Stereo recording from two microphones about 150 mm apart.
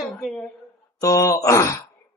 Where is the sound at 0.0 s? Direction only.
5° left (ahead or behind).